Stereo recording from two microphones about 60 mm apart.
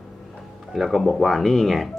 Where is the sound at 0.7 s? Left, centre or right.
Centre.